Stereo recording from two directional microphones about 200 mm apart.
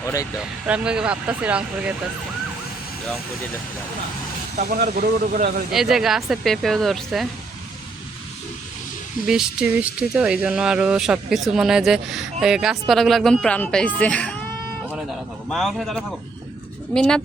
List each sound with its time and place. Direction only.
0.0 s speech: 15° left (ahead or behind)
0.7 s speech: 5° right (ahead or behind)
4.5 s speech: 45° right (ahead or behind)
5.7 s speech: centre (ahead or behind)
9.2 s speech: 5° right (ahead or behind)
15.4 s speech: centre (ahead or behind)